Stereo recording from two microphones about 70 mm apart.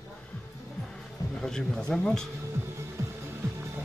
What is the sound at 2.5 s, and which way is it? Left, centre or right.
Music, right.